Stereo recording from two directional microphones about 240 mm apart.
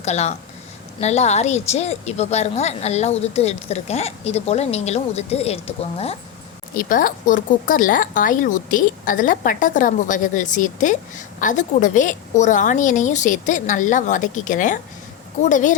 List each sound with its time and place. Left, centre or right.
0.0 s a woman's voice: left